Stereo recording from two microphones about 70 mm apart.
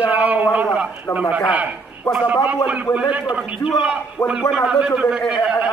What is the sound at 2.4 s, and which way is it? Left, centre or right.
Speech, right.